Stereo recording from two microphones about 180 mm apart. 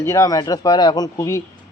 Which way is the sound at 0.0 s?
20° left (ahead or behind).